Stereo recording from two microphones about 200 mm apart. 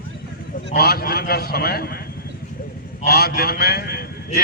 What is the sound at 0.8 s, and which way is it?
A man's voice, 50° left (ahead or behind).